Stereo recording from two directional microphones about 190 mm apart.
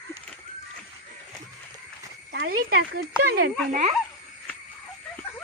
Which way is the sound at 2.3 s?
55° right (ahead or behind).